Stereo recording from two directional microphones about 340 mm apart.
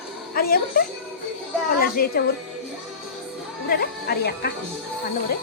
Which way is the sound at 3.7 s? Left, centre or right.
Left.